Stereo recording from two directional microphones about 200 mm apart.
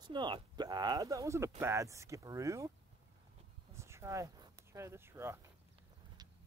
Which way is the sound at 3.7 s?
15° right (ahead or behind).